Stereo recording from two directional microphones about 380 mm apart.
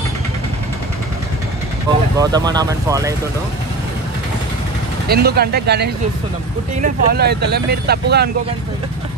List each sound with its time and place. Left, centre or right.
1.9 s speech: centre
5.0 s speech: right